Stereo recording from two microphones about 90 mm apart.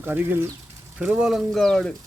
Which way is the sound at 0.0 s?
25° right (ahead or behind).